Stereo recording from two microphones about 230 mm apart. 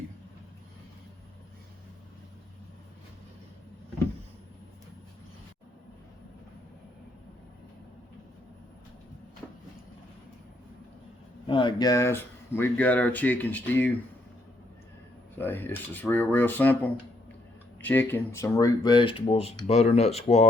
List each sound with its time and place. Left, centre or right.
11.4 s speech: left
15.4 s speech: centre
17.8 s speech: centre; by 20.5 s left